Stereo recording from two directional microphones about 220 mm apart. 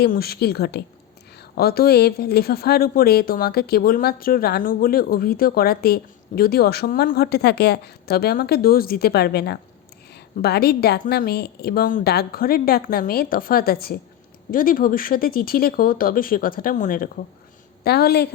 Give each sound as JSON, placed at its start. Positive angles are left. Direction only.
{"t": 0.0, "sound": "speech", "side_deg": 45}